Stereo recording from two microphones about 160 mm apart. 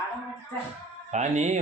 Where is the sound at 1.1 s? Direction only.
50° right (ahead or behind).